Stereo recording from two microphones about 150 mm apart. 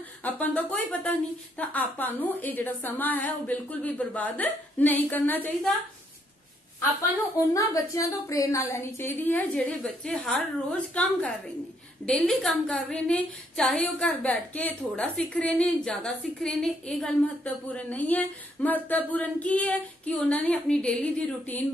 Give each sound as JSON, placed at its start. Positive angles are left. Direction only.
{"t": 0.2, "sound": "a woman's voice", "side_deg": 10}
{"t": 7.5, "sound": "a woman's voice", "side_deg": 20}